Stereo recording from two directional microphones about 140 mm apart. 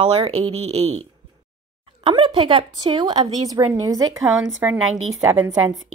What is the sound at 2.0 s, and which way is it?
Speech, 35° right (ahead or behind).